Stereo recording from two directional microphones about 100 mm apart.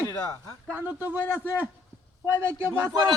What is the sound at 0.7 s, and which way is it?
A man's voice, 20° right (ahead or behind).